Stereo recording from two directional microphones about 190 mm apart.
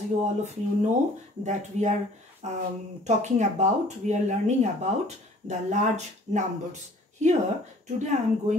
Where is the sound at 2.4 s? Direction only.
35° right (ahead or behind).